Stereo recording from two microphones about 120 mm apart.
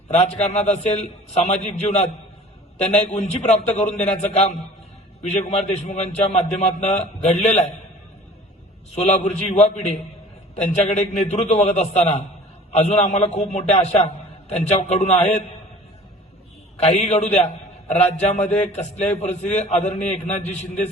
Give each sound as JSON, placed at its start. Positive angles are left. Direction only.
{"t": 0.1, "sound": "a man's voice", "side_deg": 70}
{"t": 9.0, "sound": "a man's voice", "side_deg": 65}
{"t": 16.7, "sound": "a man's voice", "side_deg": 70}